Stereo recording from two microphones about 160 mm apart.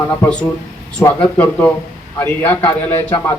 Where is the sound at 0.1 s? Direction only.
15° left (ahead or behind).